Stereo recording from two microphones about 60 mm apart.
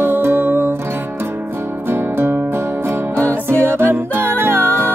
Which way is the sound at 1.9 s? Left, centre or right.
Right.